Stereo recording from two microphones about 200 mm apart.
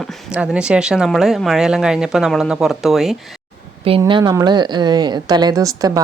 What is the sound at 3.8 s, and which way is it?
A woman's voice, 25° right (ahead or behind).